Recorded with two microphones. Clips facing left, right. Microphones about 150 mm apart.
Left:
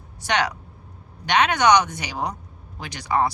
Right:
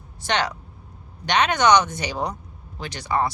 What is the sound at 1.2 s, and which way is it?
Speech, 10° left (ahead or behind).